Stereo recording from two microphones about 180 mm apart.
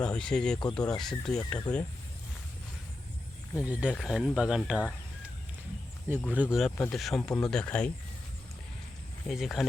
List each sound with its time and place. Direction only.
0.0 s speech: 5° left (ahead or behind)
1.7 s speech: 20° left (ahead or behind)
3.5 s speech: 5° right (ahead or behind)
6.3 s speech: 5° right (ahead or behind)
9.2 s speech: centre (ahead or behind)